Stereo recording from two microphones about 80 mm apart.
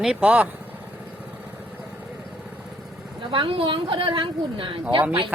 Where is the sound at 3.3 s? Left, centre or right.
Right.